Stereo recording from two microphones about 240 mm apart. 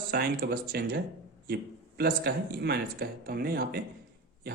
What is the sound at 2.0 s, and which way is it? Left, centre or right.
Speech, right.